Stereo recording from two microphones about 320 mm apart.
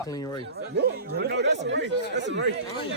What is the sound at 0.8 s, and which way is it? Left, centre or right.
Speech, right.